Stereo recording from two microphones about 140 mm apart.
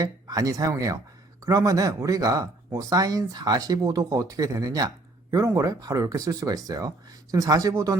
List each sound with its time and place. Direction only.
0.0 s speech: 25° right (ahead or behind)